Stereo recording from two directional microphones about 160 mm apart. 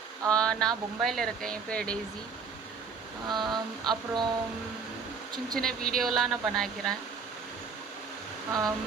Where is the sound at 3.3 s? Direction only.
25° right (ahead or behind).